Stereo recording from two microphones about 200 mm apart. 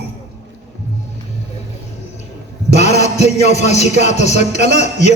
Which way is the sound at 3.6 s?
35° left (ahead or behind).